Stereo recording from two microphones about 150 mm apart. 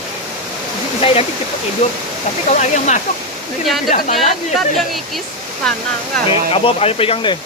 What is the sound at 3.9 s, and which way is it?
Speech, 65° left (ahead or behind).